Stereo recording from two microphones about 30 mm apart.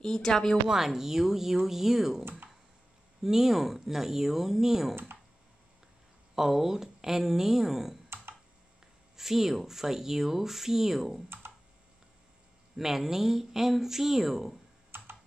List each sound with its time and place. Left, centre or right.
0.0 s speech: centre
0.7 s speech: centre
6.3 s speech: centre
9.1 s speech: centre
12.7 s speech: centre